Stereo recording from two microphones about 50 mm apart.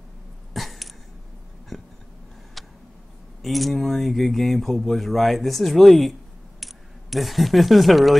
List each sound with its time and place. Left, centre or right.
0.5 s a sound: centre
2.6 s tick: centre
3.4 s speech: centre